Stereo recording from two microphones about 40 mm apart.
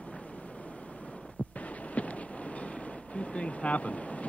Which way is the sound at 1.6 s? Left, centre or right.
Left.